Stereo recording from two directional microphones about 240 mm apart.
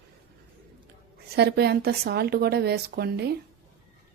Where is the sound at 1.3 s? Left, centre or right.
Right.